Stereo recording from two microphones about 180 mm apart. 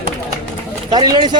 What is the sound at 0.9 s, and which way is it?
Speech, 25° right (ahead or behind).